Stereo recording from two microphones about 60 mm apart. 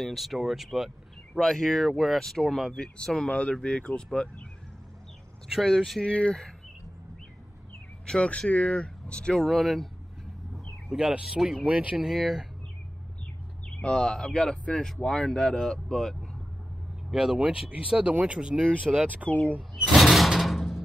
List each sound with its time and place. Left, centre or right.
0.0 s speech: centre
1.4 s speech: centre
5.5 s speech: centre
6.0 s speech: centre
8.1 s speech: centre
9.4 s speech: centre
10.5 s a sound: centre
11.6 s speech: right
12.0 s speech: centre
13.7 s speech: centre
17.1 s speech: centre
17.4 s speech: right
19.2 s speech: centre
19.7 s a sound: centre